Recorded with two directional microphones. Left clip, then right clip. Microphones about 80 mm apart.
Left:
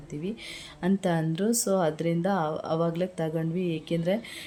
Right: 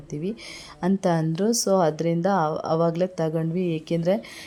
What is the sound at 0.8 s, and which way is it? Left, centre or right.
Speech, right.